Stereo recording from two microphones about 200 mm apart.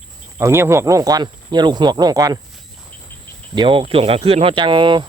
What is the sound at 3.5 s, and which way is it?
Speech, 25° right (ahead or behind).